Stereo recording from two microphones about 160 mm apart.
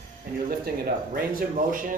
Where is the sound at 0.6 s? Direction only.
70° right (ahead or behind); by 2.0 s 55° right (ahead or behind).